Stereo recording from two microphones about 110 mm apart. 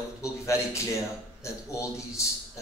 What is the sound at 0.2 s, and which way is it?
A man's voice, 25° left (ahead or behind).